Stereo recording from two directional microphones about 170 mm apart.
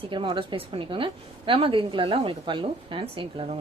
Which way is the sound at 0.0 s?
30° right (ahead or behind).